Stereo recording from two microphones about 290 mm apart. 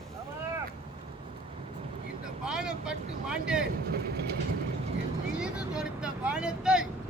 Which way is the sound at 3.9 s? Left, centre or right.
Right.